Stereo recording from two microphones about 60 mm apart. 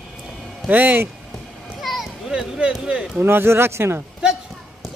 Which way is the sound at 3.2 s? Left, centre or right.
Right.